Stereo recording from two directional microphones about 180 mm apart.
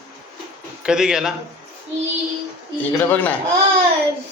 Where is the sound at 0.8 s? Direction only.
5° right (ahead or behind).